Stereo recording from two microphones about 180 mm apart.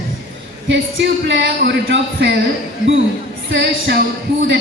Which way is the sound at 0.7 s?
85° right.